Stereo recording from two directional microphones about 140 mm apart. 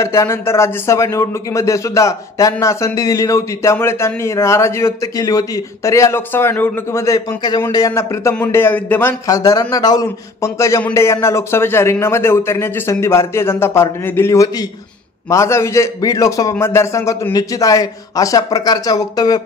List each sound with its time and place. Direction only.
0.0 s speech: 20° left (ahead or behind)
9.3 s speech: 25° left (ahead or behind)